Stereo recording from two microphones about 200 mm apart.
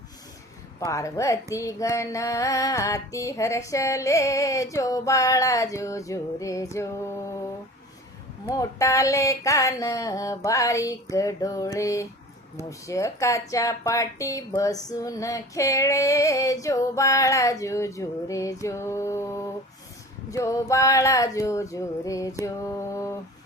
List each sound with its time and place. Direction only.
0.9 s speech: 15° left (ahead or behind)
8.4 s speech: 15° left (ahead or behind)